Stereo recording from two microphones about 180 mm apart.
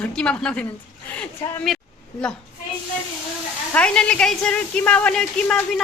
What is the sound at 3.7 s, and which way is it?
A woman's voice, 5° left (ahead or behind).